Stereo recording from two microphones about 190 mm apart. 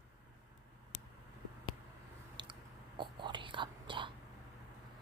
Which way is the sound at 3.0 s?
25° right (ahead or behind).